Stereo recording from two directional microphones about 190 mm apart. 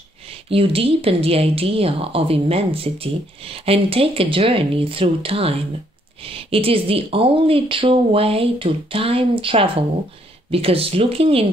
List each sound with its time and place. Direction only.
0.5 s speech: 30° right (ahead or behind)